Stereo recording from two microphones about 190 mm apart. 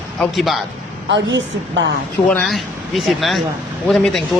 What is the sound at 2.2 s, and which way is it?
Speech, 5° left (ahead or behind).